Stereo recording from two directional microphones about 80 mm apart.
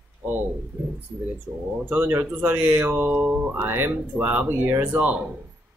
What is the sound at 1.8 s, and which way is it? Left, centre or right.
Speech, right.